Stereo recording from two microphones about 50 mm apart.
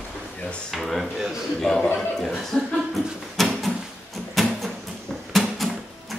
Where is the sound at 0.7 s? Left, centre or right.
Centre.